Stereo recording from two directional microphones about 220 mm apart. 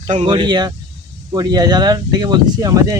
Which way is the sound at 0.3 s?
20° right (ahead or behind).